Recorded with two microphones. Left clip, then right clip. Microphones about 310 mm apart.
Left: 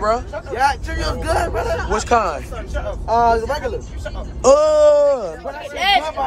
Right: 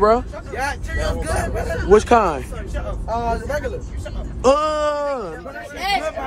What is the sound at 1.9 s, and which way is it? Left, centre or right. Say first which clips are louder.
Speech: right 5 dB; centre.